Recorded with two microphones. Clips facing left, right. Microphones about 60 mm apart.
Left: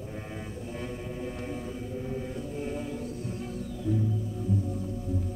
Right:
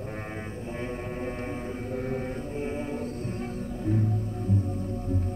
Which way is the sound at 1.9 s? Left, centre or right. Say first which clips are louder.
Right 4 dB; right.